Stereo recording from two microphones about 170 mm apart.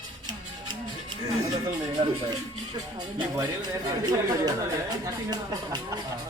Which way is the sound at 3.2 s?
20° right (ahead or behind).